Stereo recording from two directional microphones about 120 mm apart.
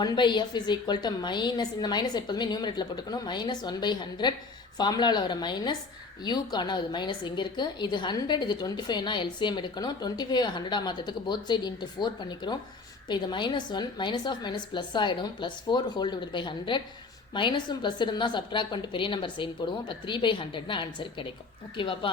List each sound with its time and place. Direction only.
0.0 s a woman's voice: 40° left (ahead or behind)